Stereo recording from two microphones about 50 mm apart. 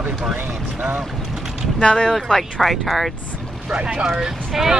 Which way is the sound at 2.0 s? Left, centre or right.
Centre.